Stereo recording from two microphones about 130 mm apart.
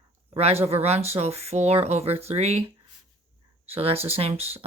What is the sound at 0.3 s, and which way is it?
Speech, 55° right (ahead or behind).